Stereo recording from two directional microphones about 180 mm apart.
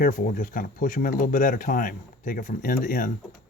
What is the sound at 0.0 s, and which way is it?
Speech, 50° left (ahead or behind).